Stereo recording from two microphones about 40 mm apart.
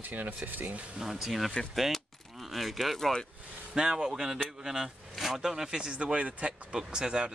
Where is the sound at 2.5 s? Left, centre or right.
Centre.